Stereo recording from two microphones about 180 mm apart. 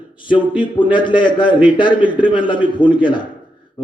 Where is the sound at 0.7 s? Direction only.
25° left (ahead or behind).